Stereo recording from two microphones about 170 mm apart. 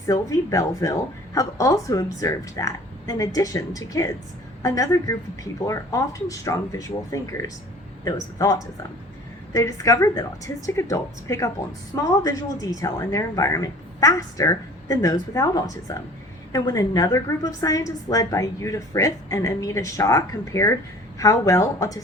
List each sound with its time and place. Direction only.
0.1 s a woman's voice: 20° left (ahead or behind)